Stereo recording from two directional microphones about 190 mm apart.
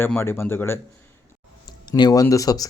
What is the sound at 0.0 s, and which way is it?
Speech, 10° left (ahead or behind).